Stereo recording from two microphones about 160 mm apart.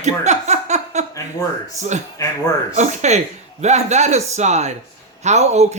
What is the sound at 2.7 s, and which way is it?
Speech, 45° right (ahead or behind).